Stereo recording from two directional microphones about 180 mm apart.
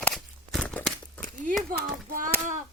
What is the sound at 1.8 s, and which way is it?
Speech, 50° right (ahead or behind).